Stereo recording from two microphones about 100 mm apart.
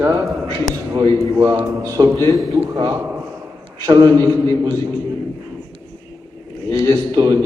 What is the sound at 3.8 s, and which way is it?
Speech, 45° right (ahead or behind).